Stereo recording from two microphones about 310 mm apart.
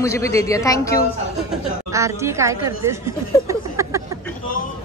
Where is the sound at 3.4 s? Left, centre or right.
Centre.